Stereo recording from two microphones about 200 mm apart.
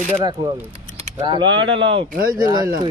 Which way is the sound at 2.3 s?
20° right (ahead or behind).